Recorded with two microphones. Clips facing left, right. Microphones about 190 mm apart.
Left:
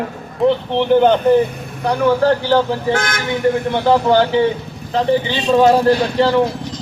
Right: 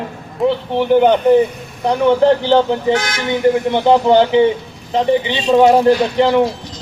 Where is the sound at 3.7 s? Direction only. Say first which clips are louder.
Right 2 dB; 20° right (ahead or behind).